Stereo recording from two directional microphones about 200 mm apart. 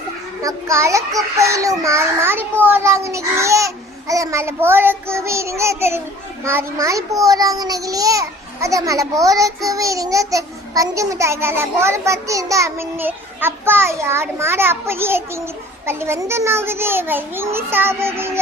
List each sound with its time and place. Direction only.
0.4 s a child's voice: 15° right (ahead or behind)